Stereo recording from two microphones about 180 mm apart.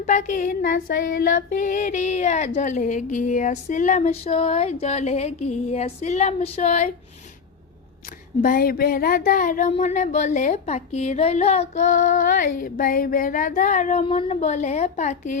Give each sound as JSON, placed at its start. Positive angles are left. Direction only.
{"t": 0.0, "sound": "speech", "side_deg": 45}
{"t": 2.6, "sound": "female singing", "side_deg": 45}
{"t": 8.4, "sound": "speech", "side_deg": 50}